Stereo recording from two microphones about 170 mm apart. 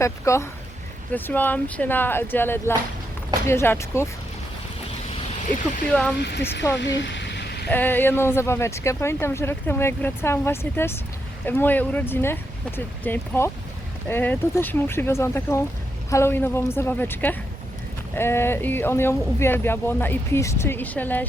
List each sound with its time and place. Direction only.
0.0 s speech: 15° left (ahead or behind)
5.9 s speech: 5° left (ahead or behind)
6.7 s a sound: 90° left
7.7 s speech: 10° left (ahead or behind)